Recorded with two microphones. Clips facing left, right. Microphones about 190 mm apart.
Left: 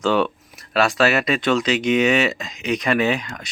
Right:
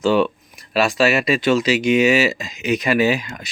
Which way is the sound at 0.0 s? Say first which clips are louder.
Right 3 dB; centre (ahead or behind).